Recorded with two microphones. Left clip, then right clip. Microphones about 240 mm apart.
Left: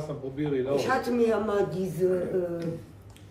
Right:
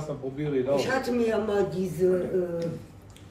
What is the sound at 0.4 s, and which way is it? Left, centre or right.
Speech, centre.